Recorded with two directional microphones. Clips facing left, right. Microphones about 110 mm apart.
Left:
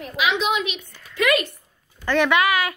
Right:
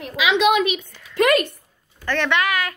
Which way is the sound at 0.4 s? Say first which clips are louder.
Right 6 dB; 55° right (ahead or behind).